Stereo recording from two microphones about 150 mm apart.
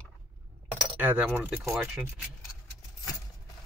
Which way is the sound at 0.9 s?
10° right (ahead or behind).